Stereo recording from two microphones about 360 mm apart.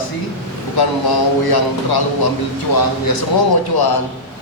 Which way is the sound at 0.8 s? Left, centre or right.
Left.